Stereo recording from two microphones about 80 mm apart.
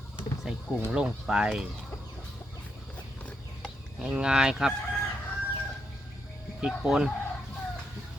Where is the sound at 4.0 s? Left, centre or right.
Centre.